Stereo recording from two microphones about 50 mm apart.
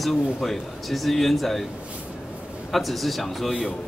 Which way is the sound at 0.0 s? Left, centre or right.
Centre.